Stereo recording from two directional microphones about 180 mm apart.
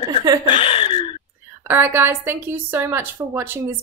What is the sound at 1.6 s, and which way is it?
A woman's voice, 10° right (ahead or behind).